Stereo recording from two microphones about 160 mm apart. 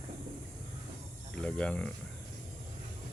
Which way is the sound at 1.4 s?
5° left (ahead or behind).